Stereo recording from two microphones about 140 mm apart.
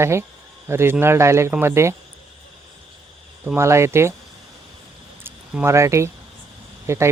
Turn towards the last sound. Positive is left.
turn(degrees=-20)  # may be behind; listen again after turning